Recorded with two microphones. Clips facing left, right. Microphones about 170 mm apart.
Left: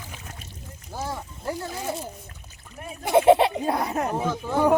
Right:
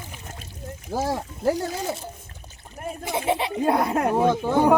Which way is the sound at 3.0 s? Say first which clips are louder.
Left 9 dB; 55° left (ahead or behind).